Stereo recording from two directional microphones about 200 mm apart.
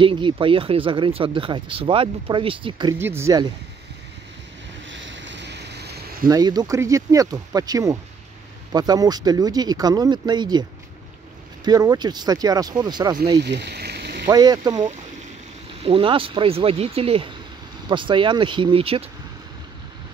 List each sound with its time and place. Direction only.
0.0 s speech: 25° right (ahead or behind)
3.0 s speech: 10° right (ahead or behind)
4.8 s boat: 65° right (ahead or behind)
6.2 s speech: 20° right (ahead or behind)
11.6 s speech: 20° right (ahead or behind)
13.4 s a sound: 55° right (ahead or behind)
14.2 s speech: 20° right (ahead or behind)